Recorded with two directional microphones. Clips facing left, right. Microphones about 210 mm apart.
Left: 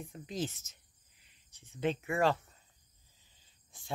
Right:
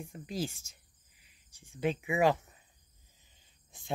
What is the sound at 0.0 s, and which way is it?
Speech, 5° right (ahead or behind).